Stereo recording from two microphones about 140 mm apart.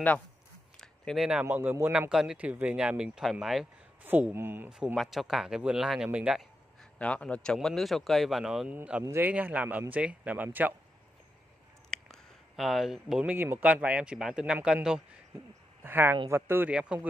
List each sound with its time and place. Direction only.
0.7 s a sound: centre (ahead or behind)
1.4 s speech: 15° right (ahead or behind)
4.0 s speech: 15° right (ahead or behind)
7.0 s speech: 10° left (ahead or behind); by 10.7 s 10° right (ahead or behind)
12.1 s speech: centre (ahead or behind)